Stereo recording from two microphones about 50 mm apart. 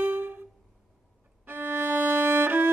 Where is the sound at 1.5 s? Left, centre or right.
Right.